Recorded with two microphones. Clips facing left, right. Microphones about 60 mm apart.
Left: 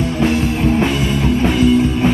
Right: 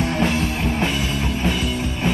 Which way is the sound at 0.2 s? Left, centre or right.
Centre.